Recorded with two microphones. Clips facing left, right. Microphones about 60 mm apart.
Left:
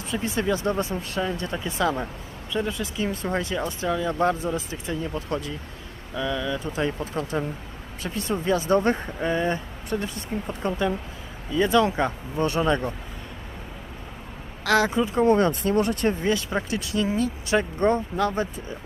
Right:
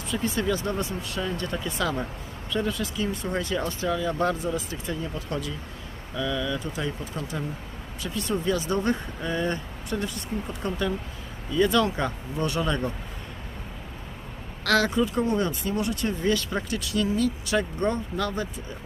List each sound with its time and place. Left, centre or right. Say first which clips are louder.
0.1 s speech: left 1 dB; left
1.4 s speech: left 2 dB; left
5.1 s speech: left 3 dB; left
6.1 s speech: left 1 dB; centre
6.7 s speech: left 5 dB; left
14.6 s speech: left 1 dB; centre
15.2 s speech: left 6 dB; left
16.2 s speech: left 1 dB; left